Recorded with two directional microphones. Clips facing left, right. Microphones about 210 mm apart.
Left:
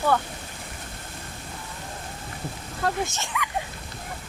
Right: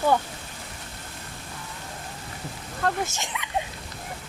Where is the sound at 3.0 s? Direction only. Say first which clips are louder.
Left 3 dB; 15° right (ahead or behind).